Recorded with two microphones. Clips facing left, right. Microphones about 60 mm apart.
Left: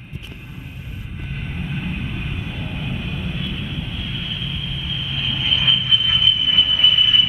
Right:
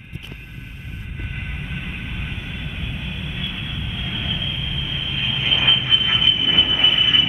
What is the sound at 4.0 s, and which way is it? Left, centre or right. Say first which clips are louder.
Vehicle: right 1 dB; right.